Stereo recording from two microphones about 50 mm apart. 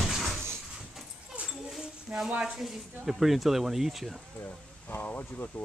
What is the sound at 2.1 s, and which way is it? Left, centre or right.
Speech, right.